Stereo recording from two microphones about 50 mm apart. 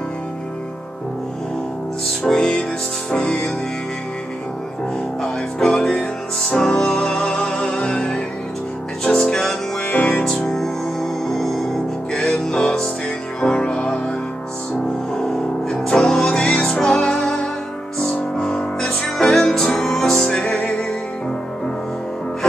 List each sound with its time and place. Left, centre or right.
2.0 s music: centre
5.2 s music: centre
9.8 s music: left
10.5 s music: centre
15.1 s music: centre